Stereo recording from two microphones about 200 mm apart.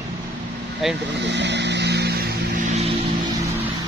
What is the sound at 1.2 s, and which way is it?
Vehicle, 60° right (ahead or behind).